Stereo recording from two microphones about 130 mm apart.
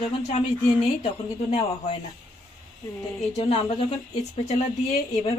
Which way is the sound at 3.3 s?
50° left (ahead or behind).